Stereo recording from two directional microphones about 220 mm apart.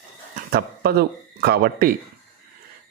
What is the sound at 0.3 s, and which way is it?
Speech, 45° right (ahead or behind).